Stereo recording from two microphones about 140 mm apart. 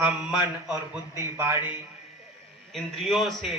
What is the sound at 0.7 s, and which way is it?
Speech, 20° right (ahead or behind).